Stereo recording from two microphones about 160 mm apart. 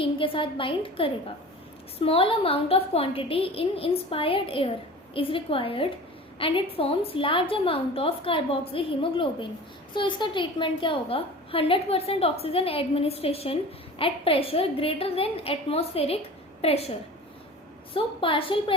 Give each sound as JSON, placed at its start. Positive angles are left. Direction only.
{"t": 0.0, "sound": "a woman's voice", "side_deg": 35}
{"t": 17.9, "sound": "a woman's voice", "side_deg": 35}